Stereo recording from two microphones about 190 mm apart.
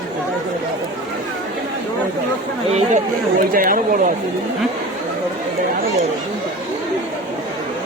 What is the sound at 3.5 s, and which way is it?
Speech, 45° right (ahead or behind).